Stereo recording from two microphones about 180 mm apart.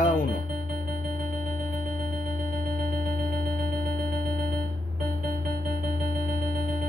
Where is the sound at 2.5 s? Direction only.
55° right (ahead or behind).